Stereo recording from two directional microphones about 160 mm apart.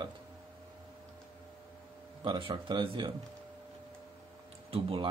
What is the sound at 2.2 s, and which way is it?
Speech, 30° right (ahead or behind).